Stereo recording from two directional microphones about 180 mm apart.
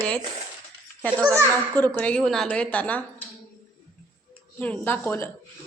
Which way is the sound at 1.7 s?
10° left (ahead or behind).